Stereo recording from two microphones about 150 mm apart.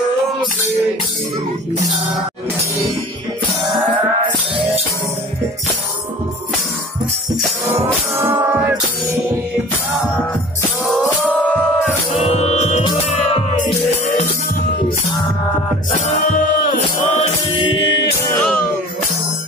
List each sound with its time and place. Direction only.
8.2 s music: 15° right (ahead or behind)
10.9 s music: 5° left (ahead or behind)
12.1 s music: 45° left (ahead or behind)
15.9 s music: 55° left (ahead or behind)
17.6 s music: 30° left (ahead or behind)
18.2 s music: 15° left (ahead or behind)